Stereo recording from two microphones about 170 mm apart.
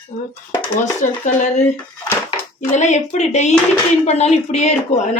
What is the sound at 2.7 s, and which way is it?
Speech, 45° left (ahead or behind).